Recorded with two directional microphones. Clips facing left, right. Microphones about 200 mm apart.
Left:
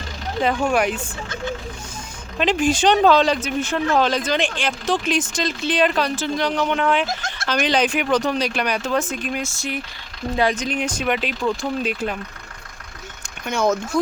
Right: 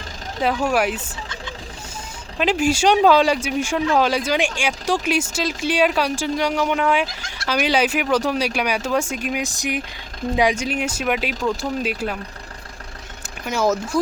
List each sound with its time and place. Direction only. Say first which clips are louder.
0.4 s speech: even; 5° right (ahead or behind)
2.4 s speech: even; 10° right (ahead or behind)
7.1 s fowl: left 9 dB; 45° left (ahead or behind)
7.4 s speech: even; 10° right (ahead or behind)
13.4 s speech: even; 5° right (ahead or behind)